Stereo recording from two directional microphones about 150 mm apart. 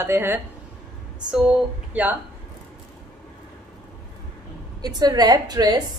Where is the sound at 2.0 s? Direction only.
10° right (ahead or behind).